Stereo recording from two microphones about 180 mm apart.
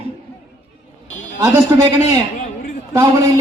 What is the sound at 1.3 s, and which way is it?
A man's voice, 15° right (ahead or behind).